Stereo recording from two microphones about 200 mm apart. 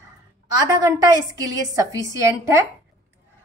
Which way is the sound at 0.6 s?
20° right (ahead or behind).